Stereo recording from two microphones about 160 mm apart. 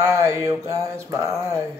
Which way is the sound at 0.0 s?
15° right (ahead or behind).